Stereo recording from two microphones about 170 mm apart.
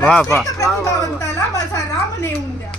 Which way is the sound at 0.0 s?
5° left (ahead or behind).